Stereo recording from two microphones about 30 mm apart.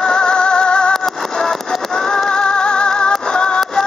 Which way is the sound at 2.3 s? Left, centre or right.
Left.